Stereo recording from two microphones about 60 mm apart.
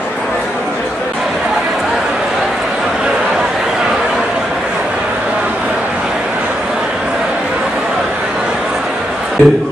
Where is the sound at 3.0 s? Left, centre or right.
Centre.